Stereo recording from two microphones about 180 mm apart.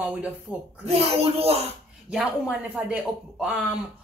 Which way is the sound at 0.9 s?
30° right (ahead or behind).